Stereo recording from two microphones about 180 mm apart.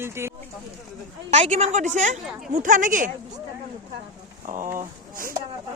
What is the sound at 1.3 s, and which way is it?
A woman's voice, 40° right (ahead or behind).